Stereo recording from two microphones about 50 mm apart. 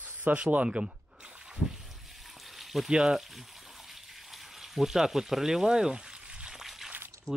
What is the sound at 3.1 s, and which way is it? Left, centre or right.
Frying, centre.